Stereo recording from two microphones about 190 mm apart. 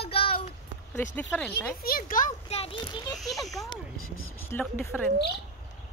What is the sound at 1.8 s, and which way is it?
Speech, 50° left (ahead or behind).